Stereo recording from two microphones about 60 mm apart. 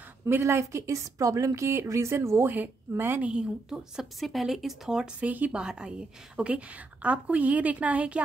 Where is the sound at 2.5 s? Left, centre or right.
Right.